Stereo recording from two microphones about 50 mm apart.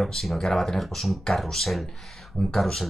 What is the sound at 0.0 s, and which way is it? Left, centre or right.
Speech, centre.